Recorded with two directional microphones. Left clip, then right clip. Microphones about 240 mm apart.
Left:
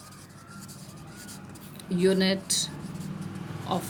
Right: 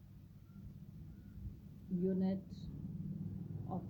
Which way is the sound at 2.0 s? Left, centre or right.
Left.